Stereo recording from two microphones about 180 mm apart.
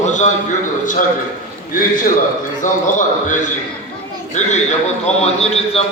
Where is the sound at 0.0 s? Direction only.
40° left (ahead or behind).